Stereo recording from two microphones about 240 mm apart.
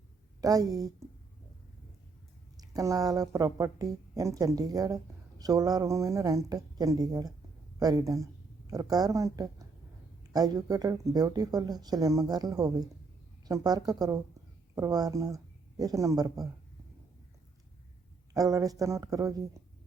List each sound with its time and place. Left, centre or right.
0.4 s speech: centre
2.6 s speech: centre
18.3 s speech: centre